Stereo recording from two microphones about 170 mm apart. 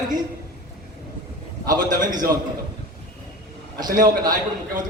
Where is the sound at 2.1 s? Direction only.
25° right (ahead or behind).